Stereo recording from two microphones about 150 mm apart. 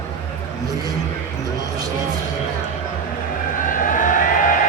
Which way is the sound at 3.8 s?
60° left (ahead or behind).